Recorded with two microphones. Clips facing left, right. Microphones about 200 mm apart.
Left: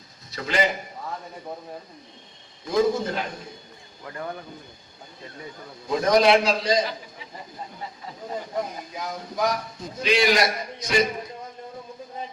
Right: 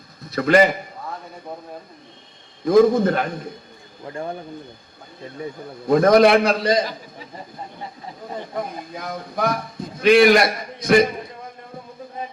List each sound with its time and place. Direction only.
0.3 s a man's voice: 55° right (ahead or behind)
2.6 s speech: 55° right (ahead or behind)
4.0 s speech: 25° right (ahead or behind)
5.8 s speech: 55° right (ahead or behind)
8.5 s speech: 55° right (ahead or behind)